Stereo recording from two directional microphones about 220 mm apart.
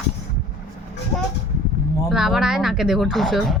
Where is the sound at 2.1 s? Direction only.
Centre (ahead or behind).